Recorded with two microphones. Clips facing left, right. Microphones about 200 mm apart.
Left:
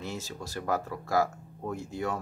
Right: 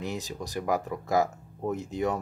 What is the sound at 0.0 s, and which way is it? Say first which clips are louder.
Speech: right 3 dB; 15° right (ahead or behind).